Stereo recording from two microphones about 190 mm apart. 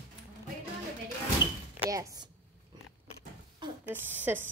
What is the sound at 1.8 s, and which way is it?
Speech, 20° right (ahead or behind).